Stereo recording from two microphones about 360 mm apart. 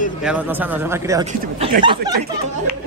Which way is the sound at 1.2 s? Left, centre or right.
Centre.